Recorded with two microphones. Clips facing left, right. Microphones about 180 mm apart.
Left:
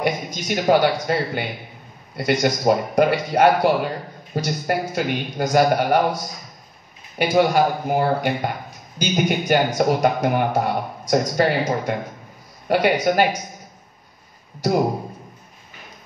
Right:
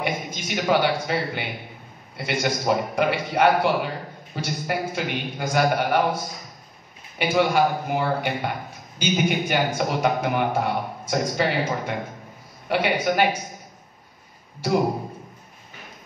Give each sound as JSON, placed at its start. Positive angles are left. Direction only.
{"t": 0.0, "sound": "a man's voice", "side_deg": 45}
{"t": 7.2, "sound": "a man's voice", "side_deg": 45}